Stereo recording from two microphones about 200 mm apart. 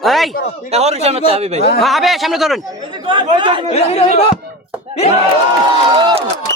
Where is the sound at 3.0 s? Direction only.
25° right (ahead or behind).